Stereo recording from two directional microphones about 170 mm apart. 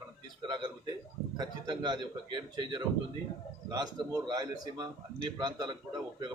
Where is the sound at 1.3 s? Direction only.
25° right (ahead or behind).